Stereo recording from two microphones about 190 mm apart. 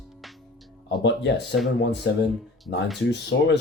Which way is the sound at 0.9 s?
65° left (ahead or behind).